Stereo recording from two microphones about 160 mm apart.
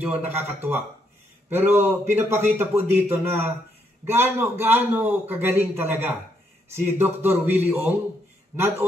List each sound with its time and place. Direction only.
0.0 s a man's voice: 10° right (ahead or behind)